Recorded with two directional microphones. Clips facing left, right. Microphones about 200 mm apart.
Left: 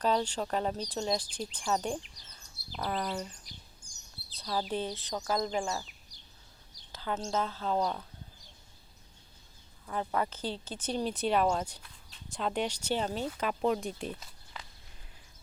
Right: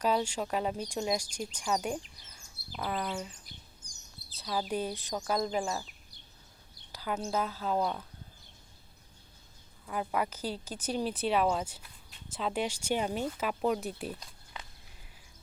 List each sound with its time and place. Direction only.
0.0 s speech: 10° right (ahead or behind)
4.4 s speech: 5° right (ahead or behind)
6.9 s a sound: 10° right (ahead or behind)
7.3 s speech: 10° right (ahead or behind)
9.8 s speech: 10° right (ahead or behind)